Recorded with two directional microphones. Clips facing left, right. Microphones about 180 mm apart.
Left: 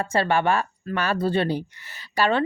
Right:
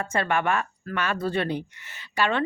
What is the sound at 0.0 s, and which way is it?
A woman's voice, 30° left (ahead or behind).